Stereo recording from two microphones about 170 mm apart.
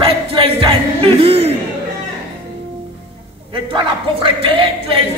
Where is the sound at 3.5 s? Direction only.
30° right (ahead or behind).